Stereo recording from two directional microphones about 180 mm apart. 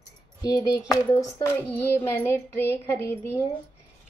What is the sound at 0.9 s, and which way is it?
Child singing, 15° left (ahead or behind).